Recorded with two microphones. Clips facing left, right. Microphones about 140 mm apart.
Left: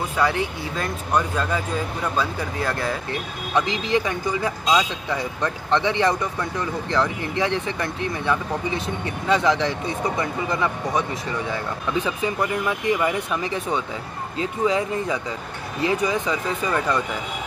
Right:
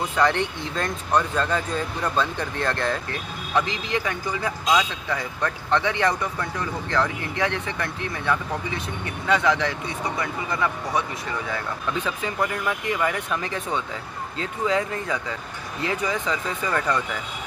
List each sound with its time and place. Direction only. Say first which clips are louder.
0.1 s speech: right 1 dB; 10° left (ahead or behind)
3.5 s speech: left 3 dB; 20° left (ahead or behind)
11.9 s speech: left 5 dB; 15° left (ahead or behind)